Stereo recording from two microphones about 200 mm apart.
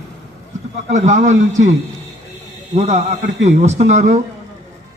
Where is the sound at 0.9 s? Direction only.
35° right (ahead or behind).